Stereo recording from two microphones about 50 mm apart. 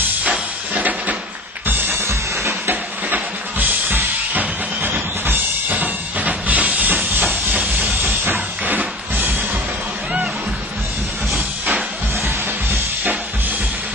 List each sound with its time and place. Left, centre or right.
0.2 s music: right
1.7 s music: right
2.0 s music: right
2.7 s drum kit: right
11.3 s music: right